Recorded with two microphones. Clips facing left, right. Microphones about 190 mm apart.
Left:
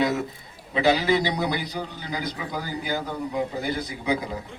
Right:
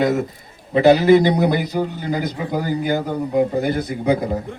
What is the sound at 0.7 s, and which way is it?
A man's voice, 50° right (ahead or behind).